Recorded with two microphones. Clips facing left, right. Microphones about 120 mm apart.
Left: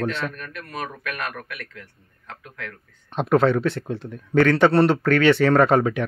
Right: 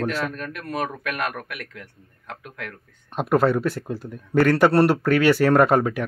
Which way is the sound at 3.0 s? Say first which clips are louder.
Left 1 dB; 5° right (ahead or behind).